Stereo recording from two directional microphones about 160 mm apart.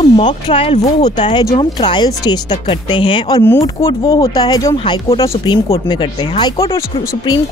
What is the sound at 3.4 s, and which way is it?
Speech, 15° left (ahead or behind).